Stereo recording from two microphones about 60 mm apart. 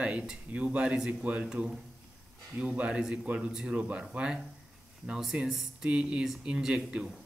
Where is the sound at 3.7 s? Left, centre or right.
Right.